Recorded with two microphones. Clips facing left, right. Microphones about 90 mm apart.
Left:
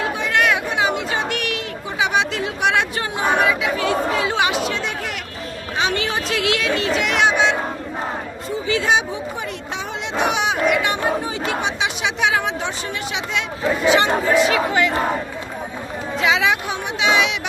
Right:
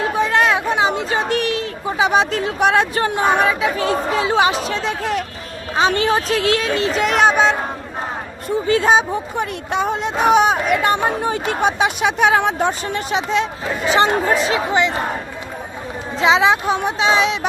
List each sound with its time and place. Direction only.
0.0 s chatter: 35° right (ahead or behind)
3.4 s speech: 35° right (ahead or behind)
9.4 s speech: 50° right (ahead or behind); by 14.9 s 25° right (ahead or behind)
16.1 s speech: 30° right (ahead or behind)